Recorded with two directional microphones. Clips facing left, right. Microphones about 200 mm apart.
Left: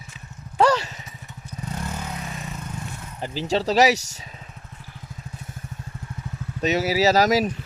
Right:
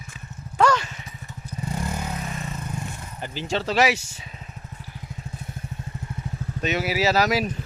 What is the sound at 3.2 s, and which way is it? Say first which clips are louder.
Speech: left 4 dB; 35° left (ahead or behind).